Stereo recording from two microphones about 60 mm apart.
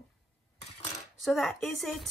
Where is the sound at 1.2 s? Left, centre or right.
Centre.